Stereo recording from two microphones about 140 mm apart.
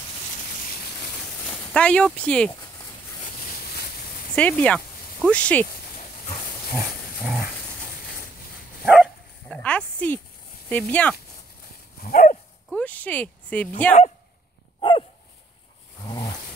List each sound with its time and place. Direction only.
1.5 s speech: 5° left (ahead or behind)
3.5 s a sound: 90° left
4.4 s speech: 10° left (ahead or behind)
6.7 s pig: centre (ahead or behind)
8.8 s dog: 10° right (ahead or behind)
9.5 s a sound: 10° left (ahead or behind)
10.7 s speech: 10° left (ahead or behind)
12.0 s dog: 85° left
12.6 s speech: 10° left (ahead or behind)
14.8 s dog: 40° left (ahead or behind)
16.1 s a sound: 30° left (ahead or behind)